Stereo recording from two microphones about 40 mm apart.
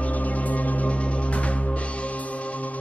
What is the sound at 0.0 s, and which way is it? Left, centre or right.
Music, left.